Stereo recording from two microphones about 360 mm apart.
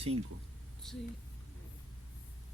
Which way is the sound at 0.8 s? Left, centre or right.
Centre.